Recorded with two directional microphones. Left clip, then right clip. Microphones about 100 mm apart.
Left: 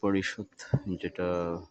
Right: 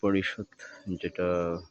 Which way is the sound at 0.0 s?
15° right (ahead or behind).